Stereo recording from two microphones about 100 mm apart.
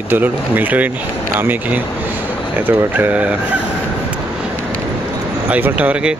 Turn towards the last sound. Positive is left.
turn(degrees=-15)  # may be behind; listen again after turning